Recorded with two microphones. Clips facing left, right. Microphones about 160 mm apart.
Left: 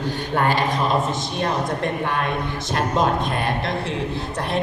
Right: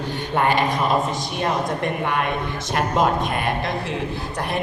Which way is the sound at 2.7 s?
25° left (ahead or behind).